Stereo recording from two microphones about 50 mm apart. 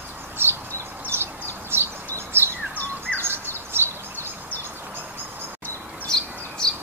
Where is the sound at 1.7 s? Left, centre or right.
Right.